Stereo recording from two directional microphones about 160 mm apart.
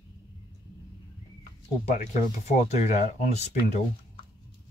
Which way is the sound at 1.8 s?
45° left (ahead or behind).